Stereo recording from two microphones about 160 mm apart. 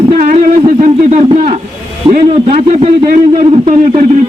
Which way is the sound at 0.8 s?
45° right (ahead or behind).